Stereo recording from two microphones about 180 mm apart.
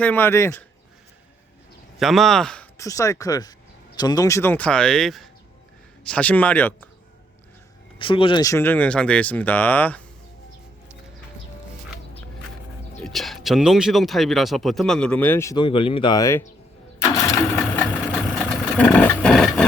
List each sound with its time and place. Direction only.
0.0 s speech: 10° left (ahead or behind)
2.0 s speech: centre (ahead or behind)
2.7 s speech: 15° left (ahead or behind)
7.9 s speech: 30° left (ahead or behind); by 10.0 s 10° left (ahead or behind)
13.0 s speech: centre (ahead or behind); by 16.5 s 15° left (ahead or behind)
17.0 s engine: 15° left (ahead or behind)
18.3 s vehicle: 5° left (ahead or behind)